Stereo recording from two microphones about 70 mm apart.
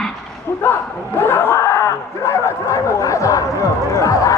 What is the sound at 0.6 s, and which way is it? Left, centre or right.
Speech, left.